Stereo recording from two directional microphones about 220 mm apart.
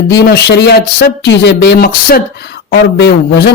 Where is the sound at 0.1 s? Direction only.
50° left (ahead or behind).